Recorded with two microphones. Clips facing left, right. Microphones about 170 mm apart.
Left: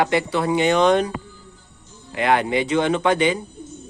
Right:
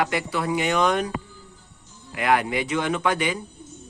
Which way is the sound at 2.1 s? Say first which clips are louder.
Left 3 dB; 30° left (ahead or behind).